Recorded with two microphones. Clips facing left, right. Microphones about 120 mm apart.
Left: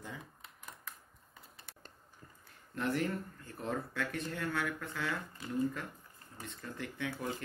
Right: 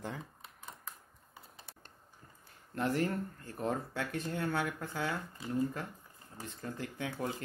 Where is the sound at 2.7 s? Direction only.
35° right (ahead or behind).